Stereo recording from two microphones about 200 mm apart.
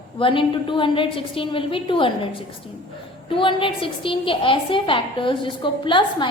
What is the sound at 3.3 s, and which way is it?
A woman's voice, 25° left (ahead or behind).